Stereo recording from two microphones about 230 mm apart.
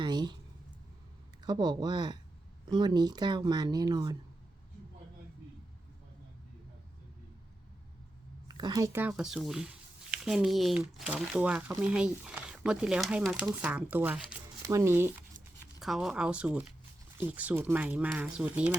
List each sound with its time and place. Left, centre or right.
0.0 s a sound: centre
1.5 s speech: centre
8.4 s speech: centre